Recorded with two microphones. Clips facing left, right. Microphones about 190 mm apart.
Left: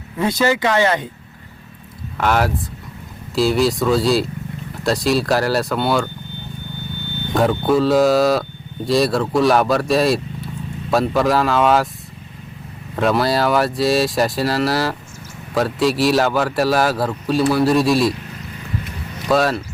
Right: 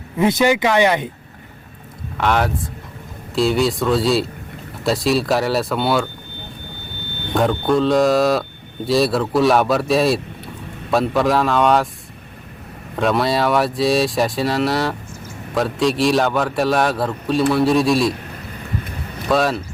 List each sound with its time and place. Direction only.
0.2 s speech: 20° right (ahead or behind)
2.1 s speech: 5° left (ahead or behind)
7.3 s speech: 5° left (ahead or behind)
13.0 s speech: centre (ahead or behind)
19.3 s speech: centre (ahead or behind)